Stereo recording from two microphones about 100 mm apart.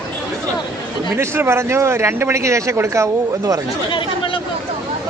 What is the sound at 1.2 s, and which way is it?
A man's voice, 25° right (ahead or behind).